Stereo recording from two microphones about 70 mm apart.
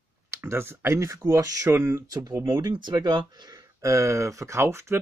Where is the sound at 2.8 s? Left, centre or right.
Right.